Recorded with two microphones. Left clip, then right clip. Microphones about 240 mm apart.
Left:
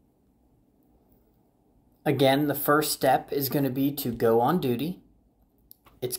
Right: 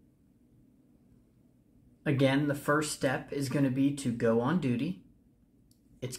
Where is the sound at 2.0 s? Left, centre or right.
Centre.